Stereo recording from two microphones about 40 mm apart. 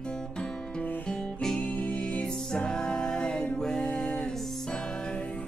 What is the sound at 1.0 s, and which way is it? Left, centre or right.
Music, centre.